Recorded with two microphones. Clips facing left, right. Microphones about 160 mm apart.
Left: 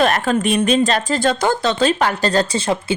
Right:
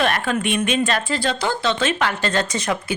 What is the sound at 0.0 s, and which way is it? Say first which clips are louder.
A woman's voice: left 4 dB; 40° left (ahead or behind).